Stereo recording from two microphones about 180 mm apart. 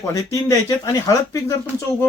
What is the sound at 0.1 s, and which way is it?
Speech, 15° left (ahead or behind).